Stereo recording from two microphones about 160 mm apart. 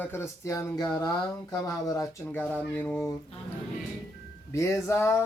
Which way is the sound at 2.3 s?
10° left (ahead or behind).